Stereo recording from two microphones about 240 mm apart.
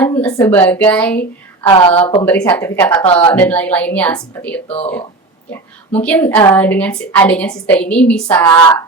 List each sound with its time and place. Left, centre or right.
0.0 s a woman's voice: centre
1.6 s speech: left
2.2 s a woman's voice: centre
3.0 s speech: left
3.3 s a woman's voice: centre
5.9 s a woman's voice: centre